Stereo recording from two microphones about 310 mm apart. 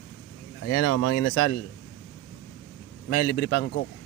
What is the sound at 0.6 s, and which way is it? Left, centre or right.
Speech, left.